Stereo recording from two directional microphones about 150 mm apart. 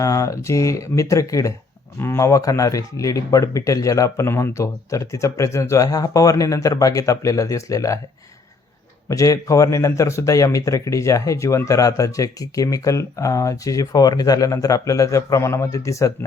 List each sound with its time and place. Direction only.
0.0 s a man's voice: 20° left (ahead or behind)
9.0 s a man's voice: 25° left (ahead or behind)